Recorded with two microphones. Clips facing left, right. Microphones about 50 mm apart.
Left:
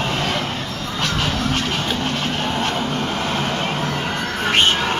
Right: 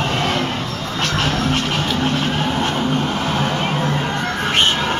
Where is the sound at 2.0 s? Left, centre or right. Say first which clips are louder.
Right 3 dB; centre.